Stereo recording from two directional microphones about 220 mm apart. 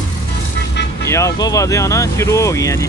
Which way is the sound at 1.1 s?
15° left (ahead or behind).